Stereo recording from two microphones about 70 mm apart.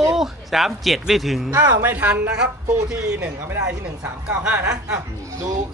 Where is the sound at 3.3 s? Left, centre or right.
Right.